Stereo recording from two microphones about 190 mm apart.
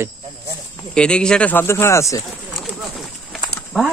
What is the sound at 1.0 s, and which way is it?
Speech, 5° left (ahead or behind).